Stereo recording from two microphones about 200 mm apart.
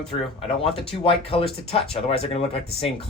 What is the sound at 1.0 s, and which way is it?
Speech, 25° left (ahead or behind).